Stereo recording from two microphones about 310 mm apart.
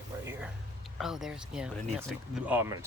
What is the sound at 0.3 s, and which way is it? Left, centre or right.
Music, centre.